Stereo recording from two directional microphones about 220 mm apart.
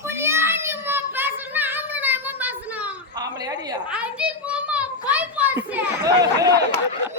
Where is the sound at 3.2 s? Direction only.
15° right (ahead or behind).